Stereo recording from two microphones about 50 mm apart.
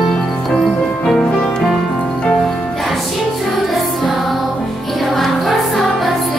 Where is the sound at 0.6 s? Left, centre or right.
Centre.